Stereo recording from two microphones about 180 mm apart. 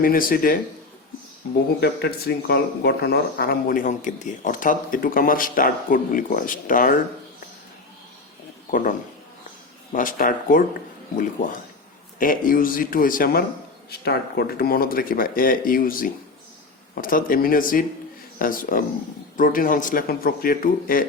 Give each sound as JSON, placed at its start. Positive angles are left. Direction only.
{"t": 0.0, "sound": "speech", "side_deg": 55}
{"t": 1.8, "sound": "speech", "side_deg": 60}
{"t": 8.7, "sound": "speech", "side_deg": 45}
{"t": 12.2, "sound": "speech", "side_deg": 50}